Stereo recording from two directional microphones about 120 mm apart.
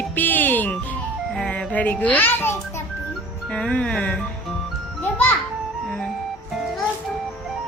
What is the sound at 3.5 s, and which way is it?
Speech, 5° left (ahead or behind).